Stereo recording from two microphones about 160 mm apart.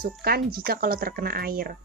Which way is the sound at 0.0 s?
70° right (ahead or behind).